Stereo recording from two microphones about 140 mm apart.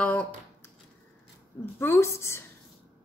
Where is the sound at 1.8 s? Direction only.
20° left (ahead or behind).